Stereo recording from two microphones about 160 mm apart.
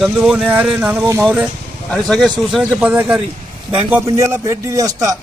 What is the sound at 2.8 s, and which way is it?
Speech, 10° right (ahead or behind).